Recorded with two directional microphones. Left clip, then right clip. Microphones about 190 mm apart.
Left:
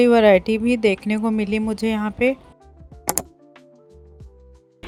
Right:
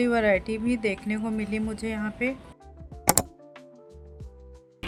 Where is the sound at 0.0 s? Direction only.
35° left (ahead or behind).